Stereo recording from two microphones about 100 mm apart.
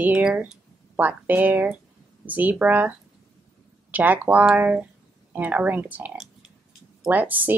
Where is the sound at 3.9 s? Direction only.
15° right (ahead or behind).